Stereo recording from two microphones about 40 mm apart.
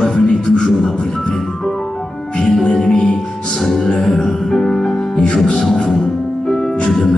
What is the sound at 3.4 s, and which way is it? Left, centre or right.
Music, centre.